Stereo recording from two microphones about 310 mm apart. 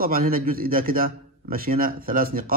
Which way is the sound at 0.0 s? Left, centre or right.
Right.